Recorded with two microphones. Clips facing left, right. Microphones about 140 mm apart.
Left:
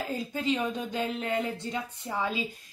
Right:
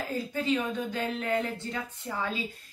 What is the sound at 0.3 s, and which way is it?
Speech, 15° left (ahead or behind).